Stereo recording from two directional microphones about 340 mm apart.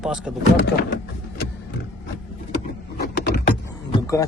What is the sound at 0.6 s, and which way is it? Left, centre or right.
Speech, left.